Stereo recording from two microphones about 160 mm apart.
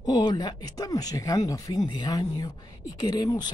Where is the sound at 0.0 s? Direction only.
25° left (ahead or behind).